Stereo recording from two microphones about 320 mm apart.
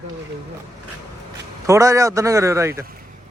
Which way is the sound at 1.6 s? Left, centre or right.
Centre.